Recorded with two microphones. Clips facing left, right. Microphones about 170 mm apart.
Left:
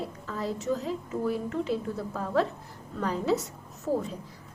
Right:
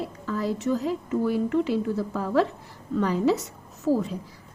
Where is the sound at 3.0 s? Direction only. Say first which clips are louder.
Right 4 dB; 75° right (ahead or behind).